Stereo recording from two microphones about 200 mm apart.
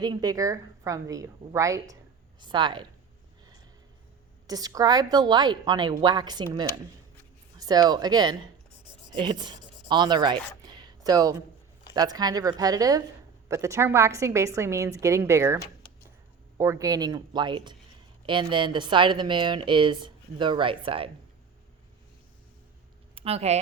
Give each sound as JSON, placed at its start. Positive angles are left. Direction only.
{"t": 0.0, "sound": "a woman's voice", "side_deg": -20}
{"t": 4.4, "sound": "a woman's voice", "side_deg": -20}
{"t": 16.6, "sound": "speech", "side_deg": -15}
{"t": 23.1, "sound": "speech", "side_deg": -30}